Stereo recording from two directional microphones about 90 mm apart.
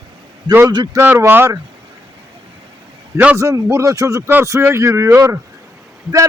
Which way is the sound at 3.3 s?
35° right (ahead or behind).